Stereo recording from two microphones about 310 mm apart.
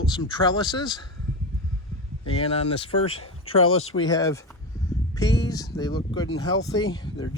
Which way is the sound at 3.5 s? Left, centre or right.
Left.